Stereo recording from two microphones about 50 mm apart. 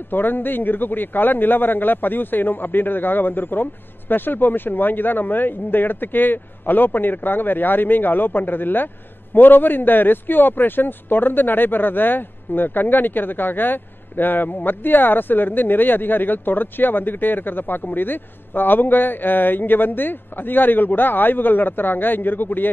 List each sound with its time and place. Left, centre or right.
0.1 s a man's voice: left